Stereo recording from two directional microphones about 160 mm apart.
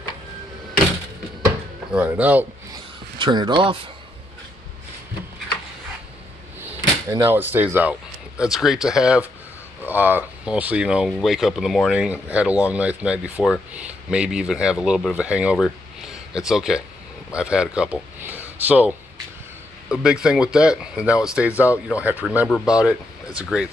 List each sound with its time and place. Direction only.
1.9 s speech: 10° right (ahead or behind)
3.2 s speech: 30° right (ahead or behind)
7.1 s speech: 15° right (ahead or behind)
15.5 s a sound: centre (ahead or behind)
17.3 s speech: 5° right (ahead or behind)